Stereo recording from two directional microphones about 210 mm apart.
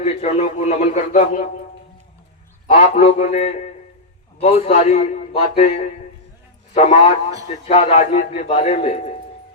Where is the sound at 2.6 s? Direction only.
35° left (ahead or behind).